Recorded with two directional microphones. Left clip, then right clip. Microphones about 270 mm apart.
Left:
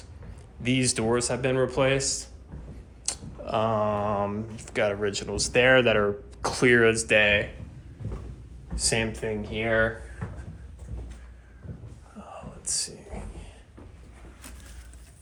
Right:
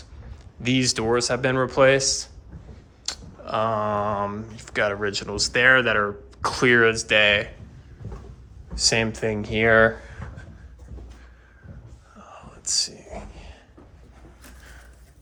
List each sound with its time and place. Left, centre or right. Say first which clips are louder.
0.6 s speech: right 3 dB; centre
3.1 s speech: right 1 dB; centre
8.7 s speech: right 6 dB; centre
9.1 s speech: right 6 dB; right
12.1 s whispering: left 2 dB; centre